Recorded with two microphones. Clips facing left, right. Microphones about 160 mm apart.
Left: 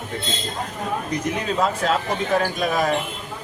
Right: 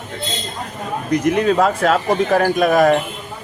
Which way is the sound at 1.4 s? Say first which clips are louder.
Right 6 dB; 55° right (ahead or behind).